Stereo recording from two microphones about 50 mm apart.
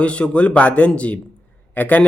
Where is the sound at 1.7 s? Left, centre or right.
Left.